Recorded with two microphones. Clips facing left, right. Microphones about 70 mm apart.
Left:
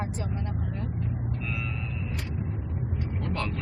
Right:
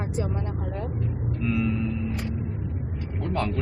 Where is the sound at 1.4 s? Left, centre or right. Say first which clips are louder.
Right 9 dB; centre.